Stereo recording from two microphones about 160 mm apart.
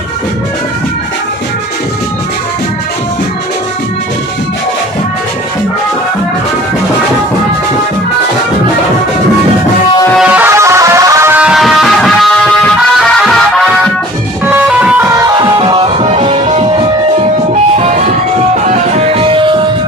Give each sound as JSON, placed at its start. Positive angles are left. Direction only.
{"t": 10.1, "sound": "music", "side_deg": -10}
{"t": 15.1, "sound": "music", "side_deg": -25}
{"t": 17.7, "sound": "music", "side_deg": -45}